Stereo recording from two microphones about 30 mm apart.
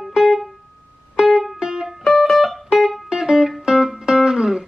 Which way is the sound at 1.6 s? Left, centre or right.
Right.